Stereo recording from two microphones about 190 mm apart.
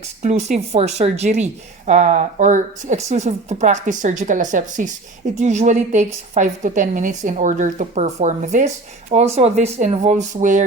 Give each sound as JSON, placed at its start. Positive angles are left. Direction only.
{"t": 0.2, "sound": "a woman's voice", "side_deg": -40}